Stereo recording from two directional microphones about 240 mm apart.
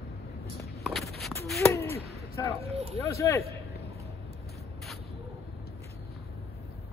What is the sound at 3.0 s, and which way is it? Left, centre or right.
Speech, centre.